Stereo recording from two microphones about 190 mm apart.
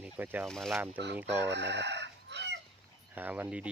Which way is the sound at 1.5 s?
65° right (ahead or behind).